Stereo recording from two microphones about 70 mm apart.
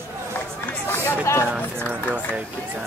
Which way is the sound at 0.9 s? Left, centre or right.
Left.